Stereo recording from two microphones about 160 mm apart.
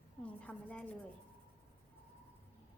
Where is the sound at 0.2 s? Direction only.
10° left (ahead or behind).